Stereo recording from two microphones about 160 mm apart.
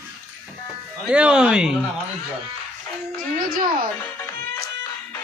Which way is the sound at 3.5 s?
65° right (ahead or behind).